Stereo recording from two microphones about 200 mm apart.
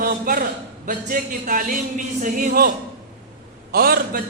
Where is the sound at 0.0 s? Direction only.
45° right (ahead or behind).